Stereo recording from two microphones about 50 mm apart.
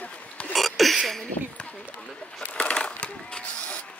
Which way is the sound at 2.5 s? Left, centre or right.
Left.